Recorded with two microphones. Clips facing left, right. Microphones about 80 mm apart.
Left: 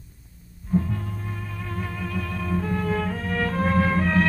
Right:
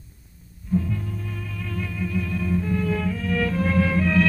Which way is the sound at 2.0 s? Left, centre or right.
Left.